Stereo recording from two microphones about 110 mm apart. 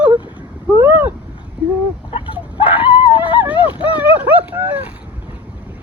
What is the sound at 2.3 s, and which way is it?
Chicken, 15° right (ahead or behind).